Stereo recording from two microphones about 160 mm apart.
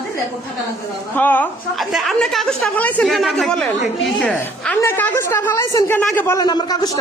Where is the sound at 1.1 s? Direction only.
10° left (ahead or behind).